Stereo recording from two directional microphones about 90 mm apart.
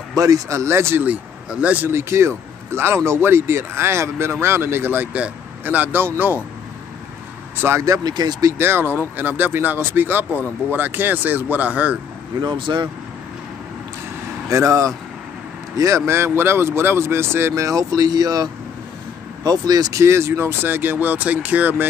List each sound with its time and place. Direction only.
0.1 s speech: 40° right (ahead or behind)
1.0 s speech: 15° right (ahead or behind)
1.9 s speech: 30° right (ahead or behind)
7.6 s speech: 35° right (ahead or behind)
8.5 s speech: 25° right (ahead or behind)
12.4 s speech: 60° right (ahead or behind)
14.5 s speech: 35° right (ahead or behind); by 21.8 s 20° right (ahead or behind)